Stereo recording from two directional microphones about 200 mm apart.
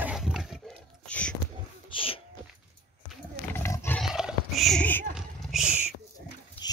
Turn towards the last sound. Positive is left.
turn(degrees=-5)  # may be behind; listen again after turning